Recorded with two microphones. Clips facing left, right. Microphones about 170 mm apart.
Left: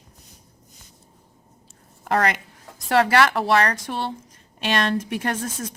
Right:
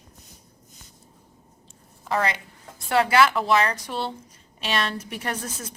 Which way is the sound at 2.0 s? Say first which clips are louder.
Left 3 dB; 55° left (ahead or behind).